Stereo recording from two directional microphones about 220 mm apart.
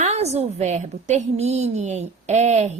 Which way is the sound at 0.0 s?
30° right (ahead or behind).